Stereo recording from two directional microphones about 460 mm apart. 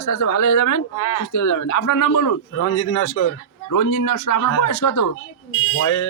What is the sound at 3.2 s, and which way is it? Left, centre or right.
Speech, left.